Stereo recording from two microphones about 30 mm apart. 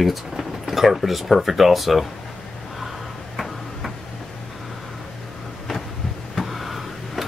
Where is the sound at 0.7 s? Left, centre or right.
Centre.